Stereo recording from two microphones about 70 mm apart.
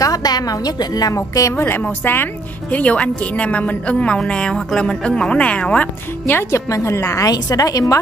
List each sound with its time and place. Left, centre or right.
0.0 s a woman's voice: left
1.1 s a woman's voice: left
1.5 s a woman's voice: left; by 5.9 s centre
6.5 s a woman's voice: left
7.2 s a woman's voice: left